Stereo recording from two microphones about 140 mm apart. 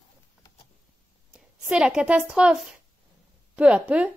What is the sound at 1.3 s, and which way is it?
A woman's voice, 5° right (ahead or behind).